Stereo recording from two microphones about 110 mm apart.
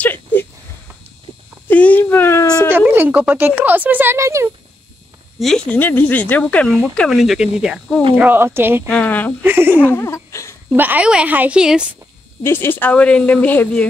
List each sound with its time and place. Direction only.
0.0 s a sound: 15° left (ahead or behind)
1.7 s a sound: 15° left (ahead or behind)
2.7 s speech: 15° right (ahead or behind)
5.4 s speech: 5° left (ahead or behind)
5.7 s speech: 20° left (ahead or behind)
7.0 s speech: centre (ahead or behind)
8.2 s speech: 20° right (ahead or behind)
8.8 s speech: 15° left (ahead or behind)
9.4 s speech: 20° right (ahead or behind)
9.8 s a sound: 20° left (ahead or behind)
10.7 s speech: 15° right (ahead or behind)
12.4 s speech: 20° left (ahead or behind)